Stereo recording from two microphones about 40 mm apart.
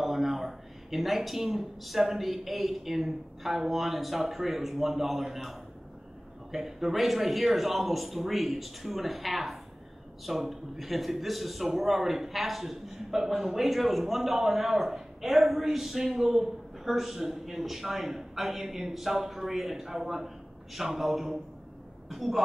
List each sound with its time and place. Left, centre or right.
0.0 s a man's voice: centre